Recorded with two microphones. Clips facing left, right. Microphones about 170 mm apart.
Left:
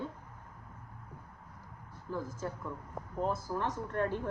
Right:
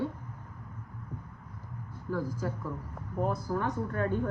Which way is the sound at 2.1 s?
20° left (ahead or behind).